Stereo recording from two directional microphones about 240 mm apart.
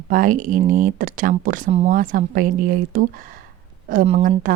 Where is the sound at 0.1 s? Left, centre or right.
Right.